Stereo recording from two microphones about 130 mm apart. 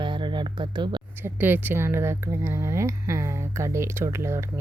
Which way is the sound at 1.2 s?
15° right (ahead or behind).